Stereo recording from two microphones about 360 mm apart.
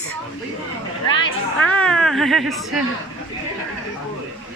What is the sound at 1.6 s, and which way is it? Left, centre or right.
Speech, centre.